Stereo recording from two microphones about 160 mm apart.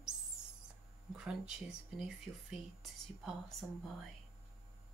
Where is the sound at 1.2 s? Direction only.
5° right (ahead or behind).